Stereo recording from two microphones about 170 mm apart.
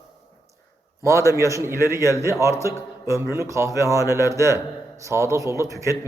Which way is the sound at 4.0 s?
20° left (ahead or behind).